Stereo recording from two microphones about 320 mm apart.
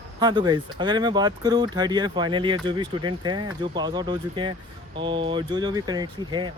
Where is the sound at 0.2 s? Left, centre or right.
Centre.